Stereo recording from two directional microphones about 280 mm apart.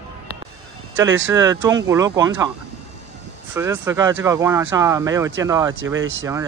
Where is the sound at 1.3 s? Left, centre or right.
Centre.